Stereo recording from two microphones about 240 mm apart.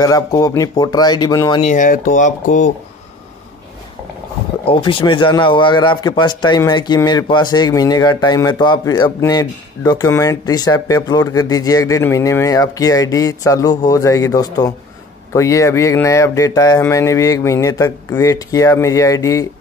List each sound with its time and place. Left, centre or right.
0.0 s a man's voice: centre
1.6 s speech: left
4.6 s a man's voice: left